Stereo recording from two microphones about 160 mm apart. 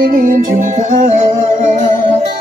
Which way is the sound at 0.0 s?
60° right (ahead or behind).